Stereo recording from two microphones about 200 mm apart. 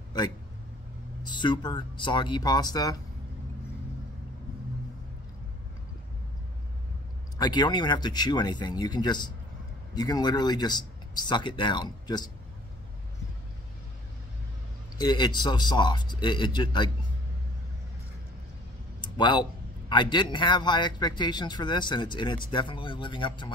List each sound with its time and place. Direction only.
1.2 s a man's voice: 20° left (ahead or behind)
7.3 s a man's voice: 20° left (ahead or behind)
15.0 s a man's voice: 20° left (ahead or behind)
19.0 s a man's voice: 20° left (ahead or behind)